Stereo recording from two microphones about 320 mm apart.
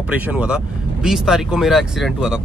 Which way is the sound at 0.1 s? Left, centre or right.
Centre.